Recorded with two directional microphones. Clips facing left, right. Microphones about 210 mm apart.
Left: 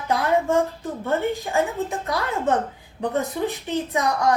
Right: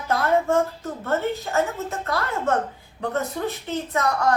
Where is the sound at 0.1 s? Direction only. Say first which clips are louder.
Even; 15° left (ahead or behind).